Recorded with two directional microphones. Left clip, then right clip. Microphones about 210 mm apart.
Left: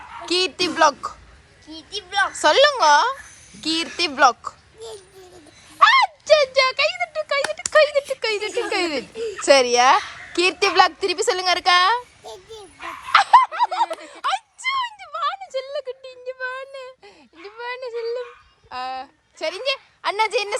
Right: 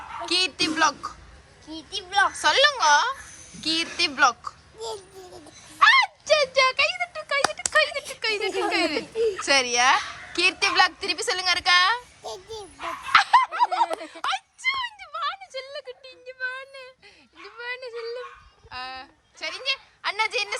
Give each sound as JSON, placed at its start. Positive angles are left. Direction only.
{"t": 0.3, "sound": "a woman's voice", "side_deg": 0}
{"t": 1.6, "sound": "a child's voice", "side_deg": -20}
{"t": 2.3, "sound": "a woman's voice", "side_deg": 0}
{"t": 5.3, "sound": "a sound", "side_deg": 0}
{"t": 6.2, "sound": "a woman's voice", "side_deg": -15}
{"t": 9.1, "sound": "speech", "side_deg": -45}
{"t": 9.4, "sound": "a woman's voice", "side_deg": 0}
{"t": 13.1, "sound": "a sound", "side_deg": 0}
{"t": 14.0, "sound": "a sound", "side_deg": 0}
{"t": 17.4, "sound": "a woman's voice", "side_deg": -5}